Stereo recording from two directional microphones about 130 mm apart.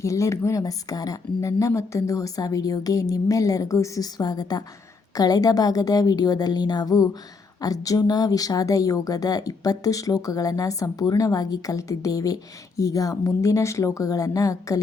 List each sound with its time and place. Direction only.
0.0 s speech: 25° left (ahead or behind)